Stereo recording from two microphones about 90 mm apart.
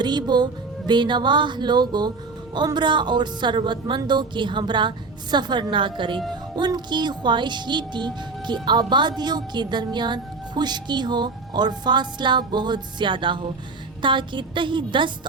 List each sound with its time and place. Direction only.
0.0 s speech: 55° right (ahead or behind)
6.6 s speech: 55° right (ahead or behind)